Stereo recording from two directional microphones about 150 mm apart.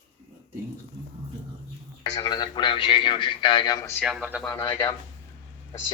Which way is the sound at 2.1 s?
25° left (ahead or behind).